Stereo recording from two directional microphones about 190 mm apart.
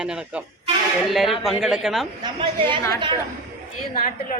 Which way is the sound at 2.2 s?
25° right (ahead or behind).